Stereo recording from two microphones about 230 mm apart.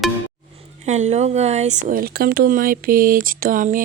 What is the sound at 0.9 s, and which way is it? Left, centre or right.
Speech, right.